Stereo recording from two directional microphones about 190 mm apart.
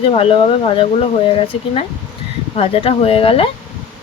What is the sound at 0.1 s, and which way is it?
Speech, 30° left (ahead or behind).